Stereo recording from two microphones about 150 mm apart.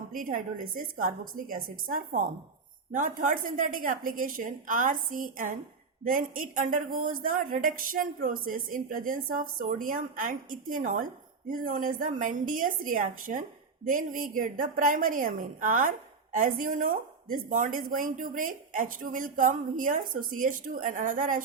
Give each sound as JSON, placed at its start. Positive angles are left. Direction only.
{"t": 0.1, "sound": "a woman's voice", "side_deg": -70}